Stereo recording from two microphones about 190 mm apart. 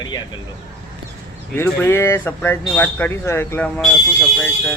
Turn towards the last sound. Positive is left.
turn(degrees=5)  # may be behind; listen again after turning